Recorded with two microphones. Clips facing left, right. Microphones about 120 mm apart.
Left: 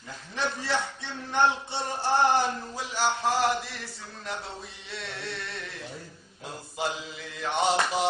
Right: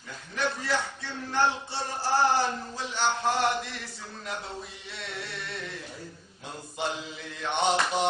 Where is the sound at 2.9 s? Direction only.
Centre (ahead or behind).